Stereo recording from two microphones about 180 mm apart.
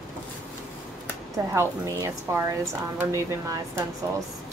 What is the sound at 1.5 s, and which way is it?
Speech, 15° right (ahead or behind).